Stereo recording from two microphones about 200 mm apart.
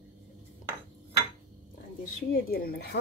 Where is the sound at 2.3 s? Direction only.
50° left (ahead or behind).